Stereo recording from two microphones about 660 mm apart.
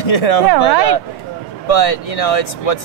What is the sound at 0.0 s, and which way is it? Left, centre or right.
Speech, left.